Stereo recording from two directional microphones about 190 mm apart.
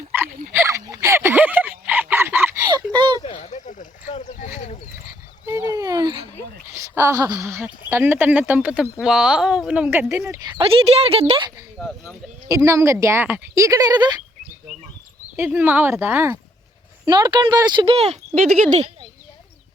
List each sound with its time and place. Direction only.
0.1 s a sound: 10° right (ahead or behind)
2.9 s a sound: 25° right (ahead or behind)
3.2 s a sound: 35° left (ahead or behind)
5.5 s dog: 15° right (ahead or behind)
6.7 s a woman's voice: 15° right (ahead or behind)
10.6 s speech: 30° right (ahead or behind)
11.8 s speech: 5° left (ahead or behind)
12.5 s a woman's voice: 15° right (ahead or behind)
15.4 s a woman's voice: 10° right (ahead or behind)
17.1 s speech: 25° right (ahead or behind)
18.3 s speech: 50° right (ahead or behind)